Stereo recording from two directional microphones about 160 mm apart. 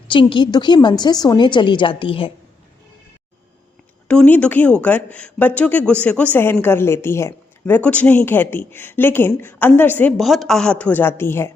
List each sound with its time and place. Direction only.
0.1 s a woman's voice: 30° left (ahead or behind)
4.1 s a woman's voice: 5° left (ahead or behind)